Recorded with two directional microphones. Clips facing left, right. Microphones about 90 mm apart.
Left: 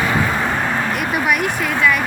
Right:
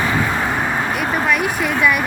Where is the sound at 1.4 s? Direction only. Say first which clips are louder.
Even; 5° right (ahead or behind).